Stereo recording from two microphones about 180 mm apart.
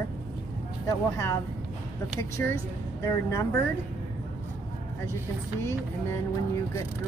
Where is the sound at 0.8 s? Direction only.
20° left (ahead or behind).